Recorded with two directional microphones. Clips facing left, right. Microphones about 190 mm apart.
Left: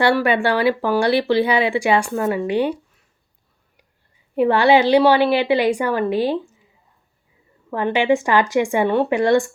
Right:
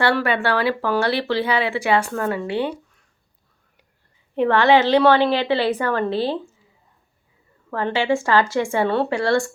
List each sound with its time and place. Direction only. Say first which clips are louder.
0.0 s speech: left 3 dB; 15° left (ahead or behind)
4.4 s speech: left 1 dB; 10° left (ahead or behind)
7.7 s speech: left 3 dB; 15° left (ahead or behind)